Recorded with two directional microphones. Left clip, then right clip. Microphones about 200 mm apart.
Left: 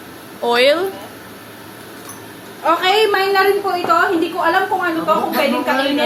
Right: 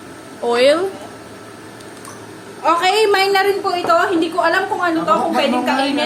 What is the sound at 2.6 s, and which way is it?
Speech, 20° right (ahead or behind).